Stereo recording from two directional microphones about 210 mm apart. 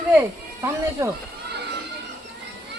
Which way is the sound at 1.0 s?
15° right (ahead or behind).